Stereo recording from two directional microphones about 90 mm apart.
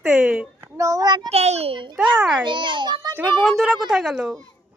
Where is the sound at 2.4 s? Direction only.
60° right (ahead or behind).